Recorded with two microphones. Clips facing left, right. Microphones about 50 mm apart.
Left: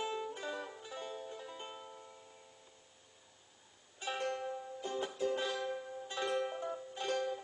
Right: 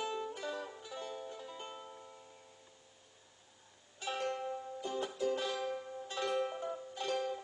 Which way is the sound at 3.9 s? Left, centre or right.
Left.